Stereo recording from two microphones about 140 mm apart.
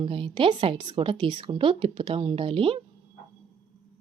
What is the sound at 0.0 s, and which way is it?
Speech, 40° right (ahead or behind).